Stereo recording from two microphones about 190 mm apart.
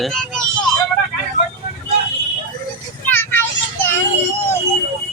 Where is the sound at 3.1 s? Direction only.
10° left (ahead or behind).